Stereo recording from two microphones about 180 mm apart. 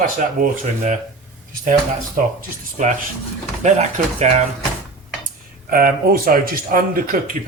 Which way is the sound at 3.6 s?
35° right (ahead or behind).